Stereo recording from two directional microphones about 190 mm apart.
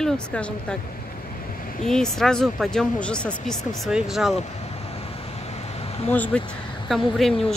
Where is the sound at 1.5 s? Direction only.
50° left (ahead or behind).